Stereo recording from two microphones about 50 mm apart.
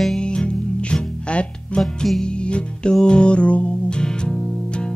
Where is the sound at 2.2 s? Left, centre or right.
Centre.